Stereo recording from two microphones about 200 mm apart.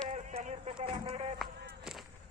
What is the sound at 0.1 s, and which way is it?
Radio, 35° right (ahead or behind).